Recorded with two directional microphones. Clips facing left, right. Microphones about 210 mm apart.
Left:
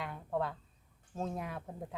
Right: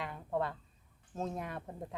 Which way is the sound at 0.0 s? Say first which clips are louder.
Even; centre (ahead or behind).